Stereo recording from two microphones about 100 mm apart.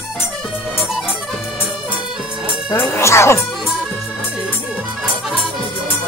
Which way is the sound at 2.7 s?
30° left (ahead or behind).